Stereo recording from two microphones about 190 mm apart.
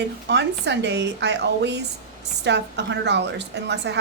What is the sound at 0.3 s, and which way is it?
Speech, 65° right (ahead or behind).